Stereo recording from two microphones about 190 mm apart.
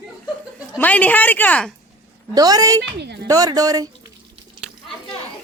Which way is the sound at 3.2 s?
20° right (ahead or behind).